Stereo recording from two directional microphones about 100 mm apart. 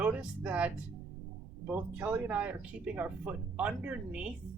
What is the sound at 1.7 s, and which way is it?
Speech, 15° right (ahead or behind).